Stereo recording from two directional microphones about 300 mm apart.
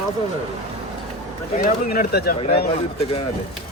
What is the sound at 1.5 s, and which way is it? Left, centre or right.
Speech, left.